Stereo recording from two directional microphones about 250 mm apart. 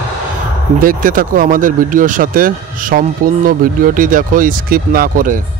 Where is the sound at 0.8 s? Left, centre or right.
Right.